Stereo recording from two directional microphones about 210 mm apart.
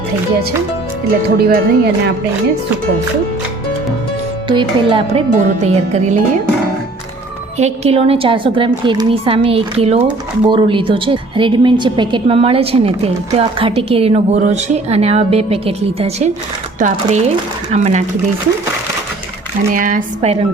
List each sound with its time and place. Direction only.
1.4 s speech: 50° right (ahead or behind)
4.4 s a woman's voice: 25° right (ahead or behind)
7.6 s a woman's voice: 30° right (ahead or behind)
17.7 s speech: 35° right (ahead or behind)
19.7 s speech: 40° right (ahead or behind)